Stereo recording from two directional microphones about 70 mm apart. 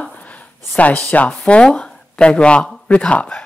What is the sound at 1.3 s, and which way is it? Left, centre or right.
Speech, centre.